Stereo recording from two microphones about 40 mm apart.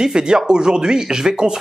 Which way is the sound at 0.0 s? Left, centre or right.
Centre.